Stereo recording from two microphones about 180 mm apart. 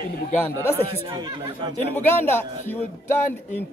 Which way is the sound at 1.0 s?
25° right (ahead or behind).